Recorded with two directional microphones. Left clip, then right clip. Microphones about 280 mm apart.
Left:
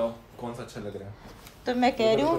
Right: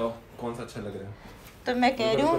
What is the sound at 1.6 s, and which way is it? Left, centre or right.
Speech, left.